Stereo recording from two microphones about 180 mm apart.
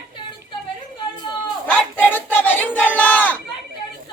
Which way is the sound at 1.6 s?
10° left (ahead or behind).